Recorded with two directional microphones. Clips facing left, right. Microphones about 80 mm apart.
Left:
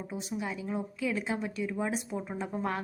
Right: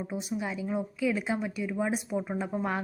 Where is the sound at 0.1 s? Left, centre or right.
Centre.